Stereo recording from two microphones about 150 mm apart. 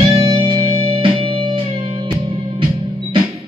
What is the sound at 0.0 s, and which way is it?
Music, 35° right (ahead or behind).